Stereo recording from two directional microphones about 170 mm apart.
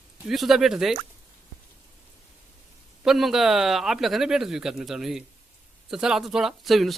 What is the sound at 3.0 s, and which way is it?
Speech, centre (ahead or behind).